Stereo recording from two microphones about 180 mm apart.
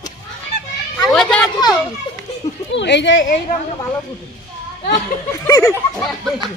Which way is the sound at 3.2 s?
50° left (ahead or behind).